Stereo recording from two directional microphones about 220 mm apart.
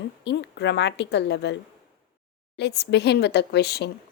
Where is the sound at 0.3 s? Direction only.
50° left (ahead or behind).